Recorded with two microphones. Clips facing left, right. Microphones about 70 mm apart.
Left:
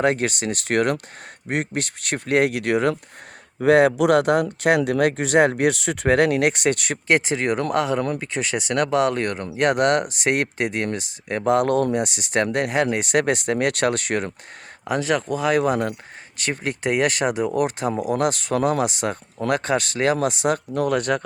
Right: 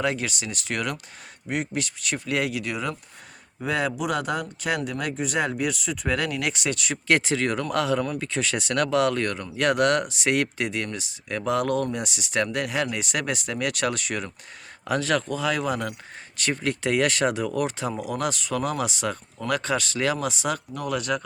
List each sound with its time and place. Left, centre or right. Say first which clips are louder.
0.0 s speech: left 6 dB; left
7.1 s speech: left 3 dB; left
14.8 s speech: left 2 dB; centre
15.4 s speech: left 6 dB; left